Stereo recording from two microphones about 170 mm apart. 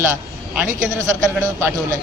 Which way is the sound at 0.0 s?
10° right (ahead or behind).